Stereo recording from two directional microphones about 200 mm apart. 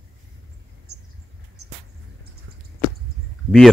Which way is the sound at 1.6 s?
90° right.